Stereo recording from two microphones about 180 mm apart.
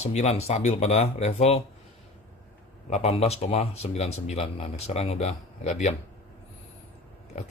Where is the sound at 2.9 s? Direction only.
35° left (ahead or behind).